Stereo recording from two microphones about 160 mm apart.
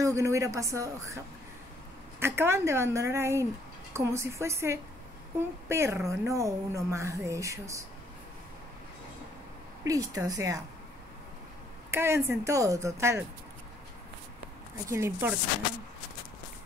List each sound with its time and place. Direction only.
0.0 s a woman's voice: 20° right (ahead or behind)
9.8 s speech: 20° right (ahead or behind)
11.9 s a woman's voice: 15° right (ahead or behind)
14.9 s a woman's voice: 15° right (ahead or behind)